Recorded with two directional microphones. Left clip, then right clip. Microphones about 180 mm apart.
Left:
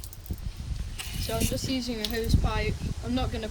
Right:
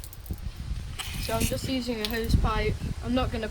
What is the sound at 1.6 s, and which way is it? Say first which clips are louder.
Speech: right 1 dB; 45° right (ahead or behind).